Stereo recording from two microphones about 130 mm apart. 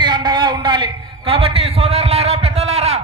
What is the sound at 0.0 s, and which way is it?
A man's voice, 35° right (ahead or behind).